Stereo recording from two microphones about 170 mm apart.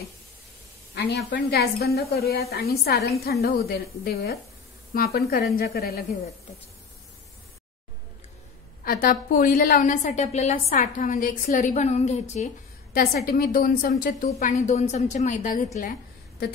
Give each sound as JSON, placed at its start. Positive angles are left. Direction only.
{"t": 0.9, "sound": "a woman's voice", "side_deg": 70}
{"t": 8.8, "sound": "a woman's voice", "side_deg": 55}
{"t": 12.9, "sound": "a woman's voice", "side_deg": 65}
{"t": 14.4, "sound": "a woman's voice", "side_deg": 45}